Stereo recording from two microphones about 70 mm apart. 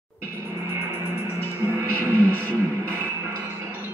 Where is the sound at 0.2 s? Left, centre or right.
Right.